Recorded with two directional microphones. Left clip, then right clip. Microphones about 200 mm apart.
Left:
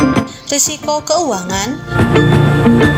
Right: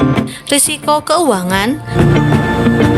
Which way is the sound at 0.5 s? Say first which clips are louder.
Right 3 dB; 30° right (ahead or behind).